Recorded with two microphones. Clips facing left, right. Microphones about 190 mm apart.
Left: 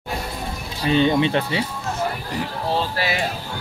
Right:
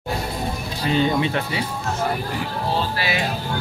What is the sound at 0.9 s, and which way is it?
Speech, 25° left (ahead or behind).